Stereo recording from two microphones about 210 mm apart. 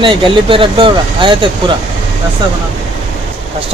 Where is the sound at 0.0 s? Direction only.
25° right (ahead or behind).